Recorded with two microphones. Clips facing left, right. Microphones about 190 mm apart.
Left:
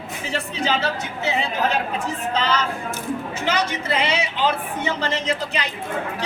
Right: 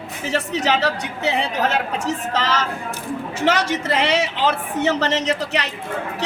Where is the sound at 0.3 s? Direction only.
75° right (ahead or behind).